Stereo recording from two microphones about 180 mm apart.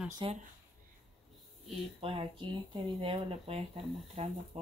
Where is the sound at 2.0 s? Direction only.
30° right (ahead or behind).